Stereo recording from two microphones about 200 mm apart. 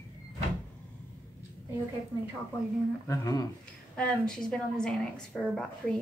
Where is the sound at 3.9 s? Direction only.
5° left (ahead or behind).